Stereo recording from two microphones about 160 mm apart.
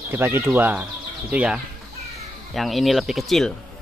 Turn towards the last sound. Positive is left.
turn(degrees=0)  # may be behind; listen again after turning